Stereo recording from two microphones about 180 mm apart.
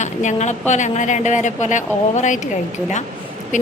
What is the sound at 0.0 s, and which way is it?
A woman's voice, 40° left (ahead or behind).